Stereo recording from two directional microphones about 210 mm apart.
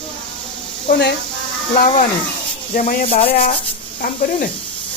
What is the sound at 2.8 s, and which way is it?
Speech, 40° left (ahead or behind).